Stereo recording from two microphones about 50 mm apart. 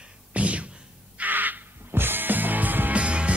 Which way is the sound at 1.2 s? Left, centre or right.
Right.